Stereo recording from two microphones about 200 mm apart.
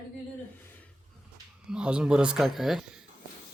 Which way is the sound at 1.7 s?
5° right (ahead or behind).